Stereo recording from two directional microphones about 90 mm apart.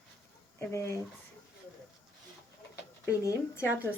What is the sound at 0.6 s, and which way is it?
Speech, 30° left (ahead or behind).